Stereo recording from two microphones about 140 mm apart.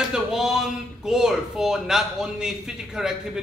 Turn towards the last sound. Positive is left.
turn(degrees=-5)  # may be behind; listen again after turning